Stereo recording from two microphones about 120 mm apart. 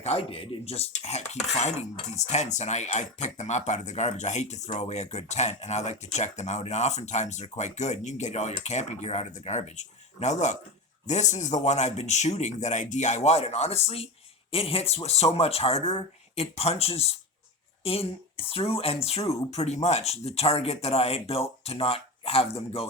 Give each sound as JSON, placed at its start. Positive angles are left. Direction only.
{"t": 0.0, "sound": "speech", "side_deg": 55}